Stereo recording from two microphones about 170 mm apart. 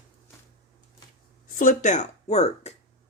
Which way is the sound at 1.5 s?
45° left (ahead or behind).